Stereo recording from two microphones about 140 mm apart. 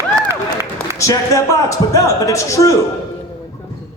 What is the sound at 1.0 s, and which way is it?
Speech, 25° left (ahead or behind).